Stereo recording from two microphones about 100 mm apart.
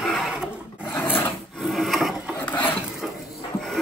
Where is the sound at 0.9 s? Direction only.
20° left (ahead or behind).